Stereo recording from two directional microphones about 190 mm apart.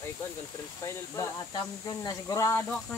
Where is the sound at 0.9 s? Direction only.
15° left (ahead or behind).